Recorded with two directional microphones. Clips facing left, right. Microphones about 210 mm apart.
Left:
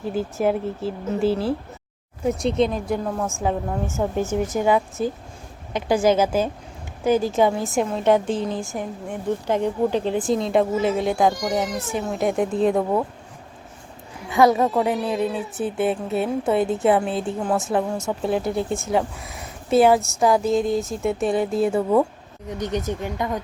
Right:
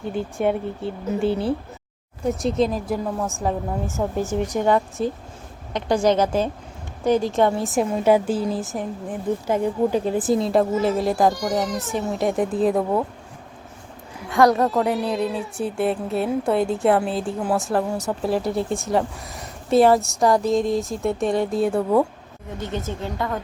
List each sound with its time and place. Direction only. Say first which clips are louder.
0.0 s a woman's voice: left 1 dB; centre (ahead or behind)
14.3 s a woman's voice: even; centre (ahead or behind)
22.4 s speech: left 3 dB; 15° left (ahead or behind)